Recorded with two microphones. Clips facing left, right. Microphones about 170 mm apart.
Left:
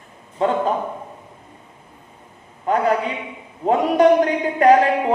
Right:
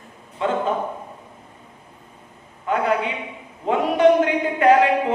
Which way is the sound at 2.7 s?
40° left (ahead or behind).